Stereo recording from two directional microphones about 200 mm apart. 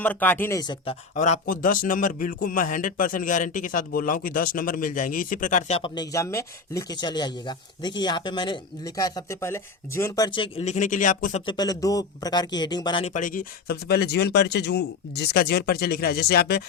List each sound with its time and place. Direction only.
0.0 s speech: 10° left (ahead or behind)
1.1 s a man's voice: 35° left (ahead or behind)
11.4 s a man's voice: 20° left (ahead or behind); by 16.6 s 55° left (ahead or behind)